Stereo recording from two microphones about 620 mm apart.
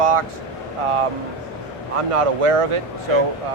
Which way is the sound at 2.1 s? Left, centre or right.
Right.